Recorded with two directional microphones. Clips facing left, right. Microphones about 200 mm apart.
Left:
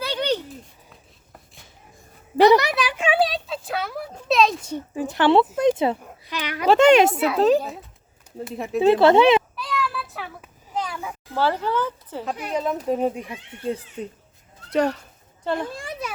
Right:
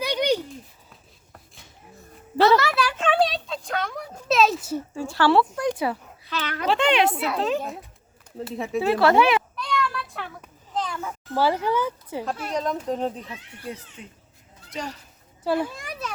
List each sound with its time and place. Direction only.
0.0 s a sound: 15° right (ahead or behind)
2.4 s a sound: 15° left (ahead or behind); by 4.8 s 5° right (ahead or behind)
4.9 s speech: 20° left (ahead or behind)
6.7 s a child's voice: 45° left (ahead or behind)
8.5 s speech: centre (ahead or behind)
8.8 s speech: 20° left (ahead or behind)
9.6 s a sound: 5° left (ahead or behind)
11.3 s a woman's voice: 10° right (ahead or behind)
12.5 s a child's voice: 5° left (ahead or behind)
14.0 s speech: 40° left (ahead or behind)
14.7 s speech: 60° left (ahead or behind)
15.4 s a woman's voice: 5° right (ahead or behind)
15.7 s a child's voice: 30° left (ahead or behind)